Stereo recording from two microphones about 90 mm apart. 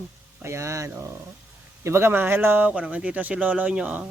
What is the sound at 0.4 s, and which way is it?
Speech, 30° right (ahead or behind).